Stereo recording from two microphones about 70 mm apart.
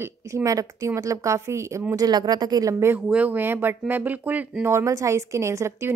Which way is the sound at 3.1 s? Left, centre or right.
Right.